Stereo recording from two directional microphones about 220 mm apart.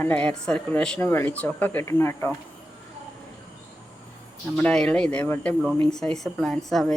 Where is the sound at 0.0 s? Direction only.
5° left (ahead or behind).